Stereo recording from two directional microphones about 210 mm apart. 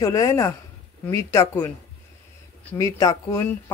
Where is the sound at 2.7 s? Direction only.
15° left (ahead or behind).